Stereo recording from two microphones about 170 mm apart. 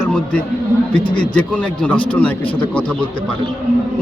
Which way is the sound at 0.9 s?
30° left (ahead or behind).